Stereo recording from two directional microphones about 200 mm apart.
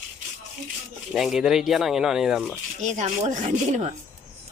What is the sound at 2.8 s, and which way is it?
Speech, 35° right (ahead or behind).